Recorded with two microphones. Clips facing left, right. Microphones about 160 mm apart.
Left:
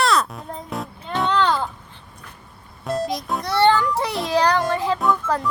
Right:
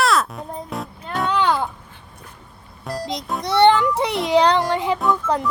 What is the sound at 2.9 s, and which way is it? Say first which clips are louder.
Music: left 4 dB; centre (ahead or behind).